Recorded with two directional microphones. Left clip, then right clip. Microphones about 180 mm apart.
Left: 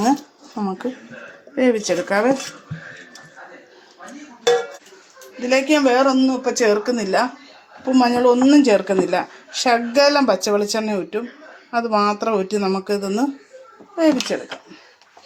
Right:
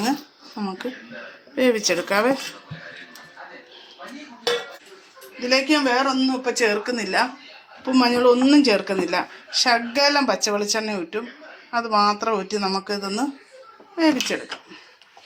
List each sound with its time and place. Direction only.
0.6 s speech: 45° left (ahead or behind)
1.5 s speech: 35° left (ahead or behind)
5.5 s speech: 45° left (ahead or behind)
7.9 s speech: 35° left (ahead or behind)